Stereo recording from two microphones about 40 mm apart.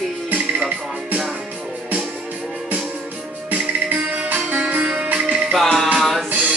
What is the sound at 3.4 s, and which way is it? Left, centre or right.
Music, right.